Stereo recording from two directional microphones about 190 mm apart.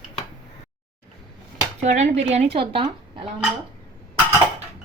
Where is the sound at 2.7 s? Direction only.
30° right (ahead or behind).